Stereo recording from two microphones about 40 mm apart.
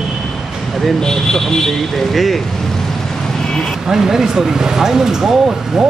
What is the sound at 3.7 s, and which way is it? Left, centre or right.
A man's voice, centre.